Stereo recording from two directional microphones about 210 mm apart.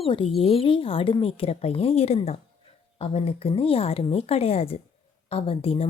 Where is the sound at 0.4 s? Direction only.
25° left (ahead or behind).